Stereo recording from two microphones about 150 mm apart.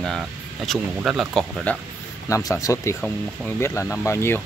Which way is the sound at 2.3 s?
25° left (ahead or behind).